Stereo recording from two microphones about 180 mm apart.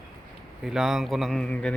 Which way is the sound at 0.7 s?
Centre (ahead or behind).